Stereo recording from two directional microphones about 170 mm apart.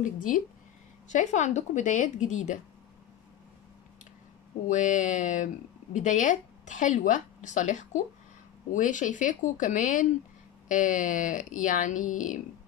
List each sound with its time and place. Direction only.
0.0 s a woman's voice: 50° left (ahead or behind)
4.6 s a woman's voice: 45° left (ahead or behind)